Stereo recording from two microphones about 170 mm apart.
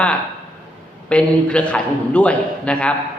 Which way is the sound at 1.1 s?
5° left (ahead or behind).